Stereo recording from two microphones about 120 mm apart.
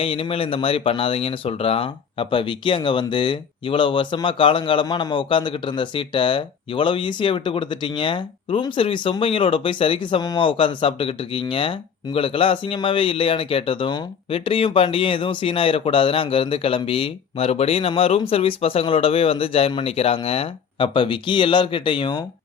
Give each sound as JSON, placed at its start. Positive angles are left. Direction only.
{"t": 0.0, "sound": "speech", "side_deg": 50}